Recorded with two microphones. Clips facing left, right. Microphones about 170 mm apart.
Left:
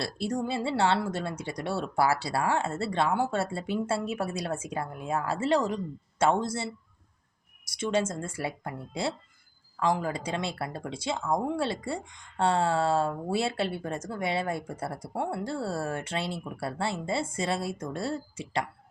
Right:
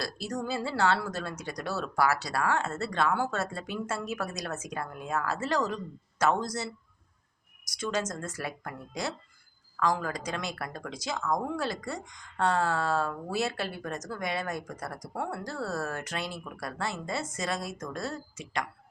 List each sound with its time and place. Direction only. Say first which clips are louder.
0.0 s speech: left 3 dB; 25° left (ahead or behind)